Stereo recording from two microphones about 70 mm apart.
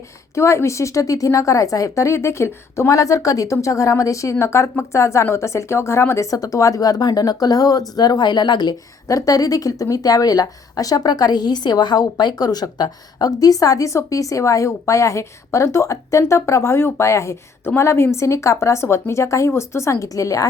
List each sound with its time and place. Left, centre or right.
0.3 s a woman's voice: left
6.3 s speech: left
9.0 s a woman's voice: left